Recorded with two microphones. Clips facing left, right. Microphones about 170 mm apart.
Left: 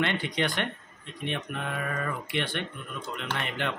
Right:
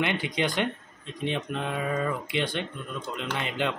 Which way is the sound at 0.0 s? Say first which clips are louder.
Right 1 dB; 15° right (ahead or behind).